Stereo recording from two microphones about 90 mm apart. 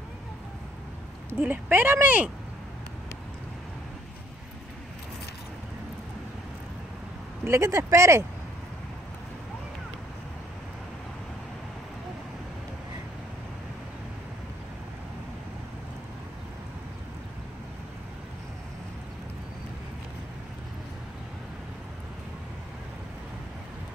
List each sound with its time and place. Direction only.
1.4 s speech: 20° right (ahead or behind)
7.4 s speech: 30° right (ahead or behind)